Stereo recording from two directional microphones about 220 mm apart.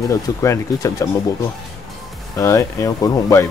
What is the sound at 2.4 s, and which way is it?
Speech, 10° left (ahead or behind).